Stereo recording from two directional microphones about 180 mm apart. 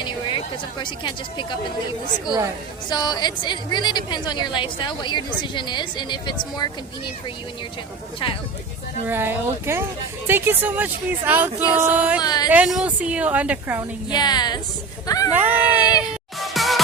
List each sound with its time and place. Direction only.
0.0 s speech: 25° left (ahead or behind)
2.9 s a woman's voice: 20° left (ahead or behind)
9.0 s speech: 10° right (ahead or behind)
12.2 s a woman's voice: 20° left (ahead or behind)
12.5 s speech: 5° right (ahead or behind)
14.1 s a woman's voice: 25° left (ahead or behind)
15.3 s speech: 10° right (ahead or behind)
16.4 s music: centre (ahead or behind)